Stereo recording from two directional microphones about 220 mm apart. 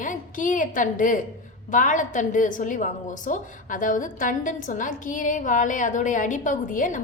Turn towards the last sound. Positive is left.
turn(degrees=35)  # may be behind; listen again after turning